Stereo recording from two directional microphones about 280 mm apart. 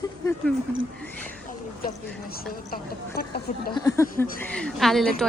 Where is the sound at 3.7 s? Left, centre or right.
Centre.